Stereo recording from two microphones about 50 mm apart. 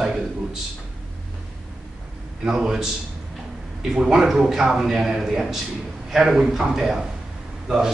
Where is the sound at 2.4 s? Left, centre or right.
Centre.